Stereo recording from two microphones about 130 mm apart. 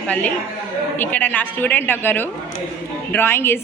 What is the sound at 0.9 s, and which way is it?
A woman's voice, 15° left (ahead or behind).